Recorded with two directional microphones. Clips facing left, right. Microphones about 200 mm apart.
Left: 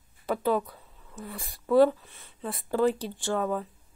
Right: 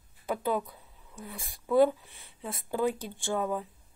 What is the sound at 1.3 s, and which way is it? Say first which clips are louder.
Speech: left 3 dB; 50° left (ahead or behind).